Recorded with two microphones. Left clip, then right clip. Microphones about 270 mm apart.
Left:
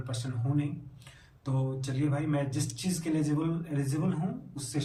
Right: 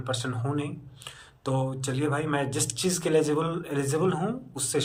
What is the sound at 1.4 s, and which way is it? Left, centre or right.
Speech, centre.